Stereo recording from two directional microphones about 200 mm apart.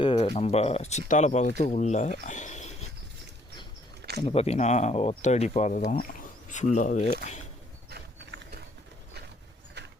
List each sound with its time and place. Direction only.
0.0 s speech: 30° left (ahead or behind)
4.2 s speech: 30° left (ahead or behind)
7.9 s clip-clop: 55° right (ahead or behind)
9.8 s a sound: 55° right (ahead or behind)